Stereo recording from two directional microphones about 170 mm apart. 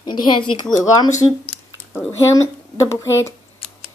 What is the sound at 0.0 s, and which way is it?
Speech, 25° left (ahead or behind).